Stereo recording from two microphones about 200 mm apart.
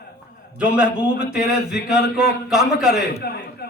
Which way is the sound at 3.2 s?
50° left (ahead or behind).